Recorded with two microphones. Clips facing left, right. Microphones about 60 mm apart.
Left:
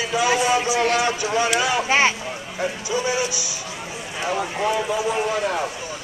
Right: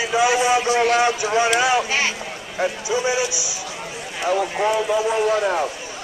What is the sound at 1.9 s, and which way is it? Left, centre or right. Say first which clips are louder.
Speech: left 4 dB; left.